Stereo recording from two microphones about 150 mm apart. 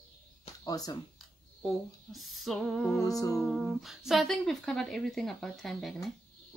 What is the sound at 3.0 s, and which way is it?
Speech, 25° left (ahead or behind).